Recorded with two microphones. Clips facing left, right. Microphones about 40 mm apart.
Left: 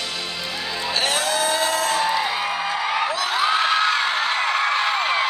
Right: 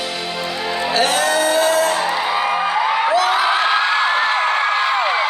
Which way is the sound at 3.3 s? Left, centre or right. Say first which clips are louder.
Right 4 dB; right.